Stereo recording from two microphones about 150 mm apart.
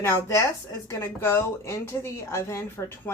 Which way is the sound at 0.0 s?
20° left (ahead or behind).